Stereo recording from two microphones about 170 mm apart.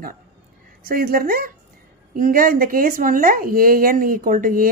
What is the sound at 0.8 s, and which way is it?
A woman's voice, 60° right (ahead or behind).